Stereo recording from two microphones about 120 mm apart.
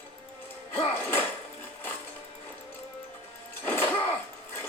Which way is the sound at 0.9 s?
20° left (ahead or behind).